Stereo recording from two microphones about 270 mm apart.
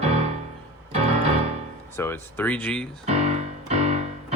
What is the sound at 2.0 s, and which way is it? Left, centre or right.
Speech, centre.